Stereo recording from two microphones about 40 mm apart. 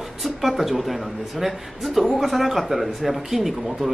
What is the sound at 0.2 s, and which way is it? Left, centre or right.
Speech, centre.